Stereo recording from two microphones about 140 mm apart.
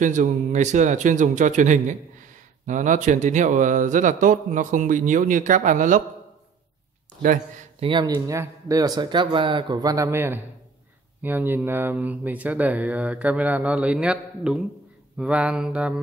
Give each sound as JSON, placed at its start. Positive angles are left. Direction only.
{"t": 0.0, "sound": "speech", "side_deg": -60}
{"t": 7.8, "sound": "speech", "side_deg": -35}
{"t": 8.1, "sound": "speech", "side_deg": -20}